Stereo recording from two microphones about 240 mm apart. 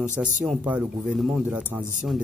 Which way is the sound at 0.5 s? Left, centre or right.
Centre.